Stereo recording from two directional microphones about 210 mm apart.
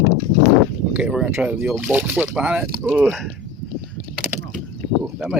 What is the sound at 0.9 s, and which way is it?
Speech, 5° right (ahead or behind).